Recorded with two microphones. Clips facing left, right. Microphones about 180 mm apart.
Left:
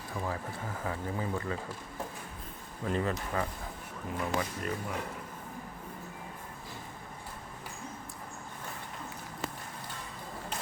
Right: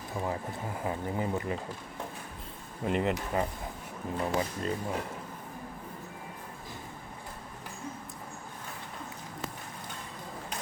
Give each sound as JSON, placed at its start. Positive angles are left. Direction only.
{"t": 0.2, "sound": "speech", "side_deg": -20}
{"t": 2.8, "sound": "speech", "side_deg": -20}